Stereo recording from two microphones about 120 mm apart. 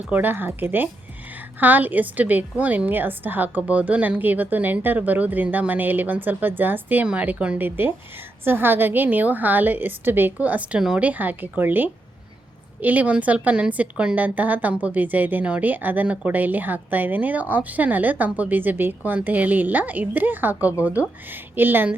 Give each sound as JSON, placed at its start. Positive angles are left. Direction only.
{"t": 0.1, "sound": "a woman's voice", "side_deg": -15}